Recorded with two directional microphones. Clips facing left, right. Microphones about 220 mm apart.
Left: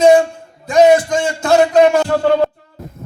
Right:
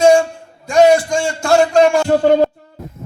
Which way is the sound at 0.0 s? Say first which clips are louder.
Left 1 dB; 20° left (ahead or behind).